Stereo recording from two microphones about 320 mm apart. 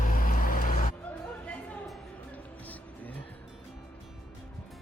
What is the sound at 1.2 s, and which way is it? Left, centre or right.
Music, centre.